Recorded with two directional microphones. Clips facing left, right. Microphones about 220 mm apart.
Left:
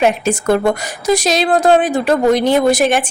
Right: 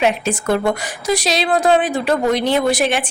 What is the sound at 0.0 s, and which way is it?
A woman's voice, 45° left (ahead or behind).